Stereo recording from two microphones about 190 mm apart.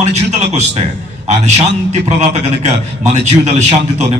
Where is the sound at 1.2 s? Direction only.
35° right (ahead or behind).